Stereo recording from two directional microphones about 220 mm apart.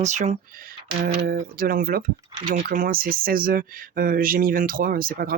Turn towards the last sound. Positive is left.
turn(degrees=-40)  # may be behind; listen again after turning